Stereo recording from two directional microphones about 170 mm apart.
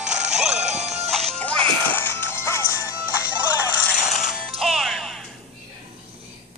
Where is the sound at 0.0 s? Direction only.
45° right (ahead or behind).